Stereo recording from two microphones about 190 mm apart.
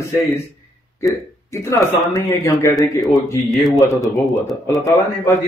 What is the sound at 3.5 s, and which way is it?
Speech, centre (ahead or behind).